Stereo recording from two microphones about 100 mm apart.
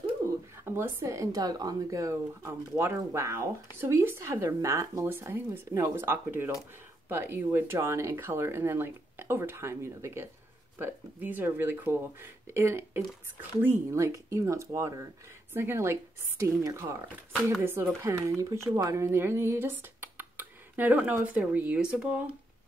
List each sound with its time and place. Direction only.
0.7 s speech: 25° right (ahead or behind); by 22.3 s 10° right (ahead or behind)